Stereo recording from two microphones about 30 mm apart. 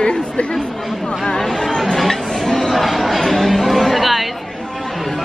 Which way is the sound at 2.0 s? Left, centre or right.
Centre.